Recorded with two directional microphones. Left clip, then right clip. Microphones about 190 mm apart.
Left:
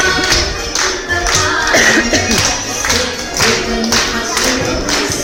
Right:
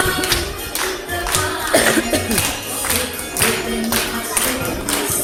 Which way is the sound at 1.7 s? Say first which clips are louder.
Left 4 dB; 15° right (ahead or behind).